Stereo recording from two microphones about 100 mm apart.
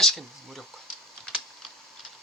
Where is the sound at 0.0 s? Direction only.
Centre (ahead or behind).